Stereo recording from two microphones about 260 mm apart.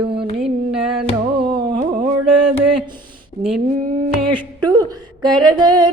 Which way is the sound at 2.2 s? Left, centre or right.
Right.